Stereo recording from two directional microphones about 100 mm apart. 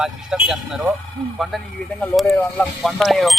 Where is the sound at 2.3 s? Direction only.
15° left (ahead or behind).